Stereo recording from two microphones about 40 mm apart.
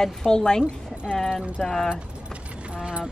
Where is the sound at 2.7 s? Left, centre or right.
Right.